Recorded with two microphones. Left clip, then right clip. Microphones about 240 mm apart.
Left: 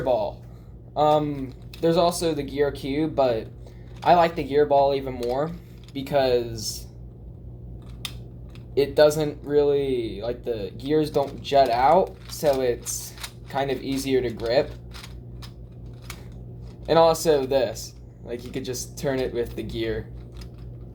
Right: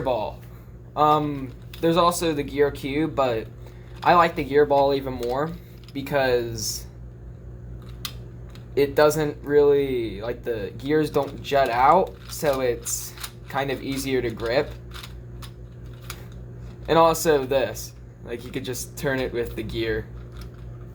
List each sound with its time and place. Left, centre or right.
0.0 s speech: right
8.7 s speech: right
16.8 s speech: right